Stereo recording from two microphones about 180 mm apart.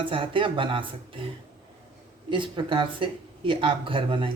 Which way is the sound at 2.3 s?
25° right (ahead or behind).